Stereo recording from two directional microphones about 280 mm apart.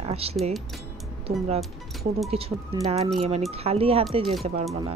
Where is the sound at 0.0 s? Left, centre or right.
Right.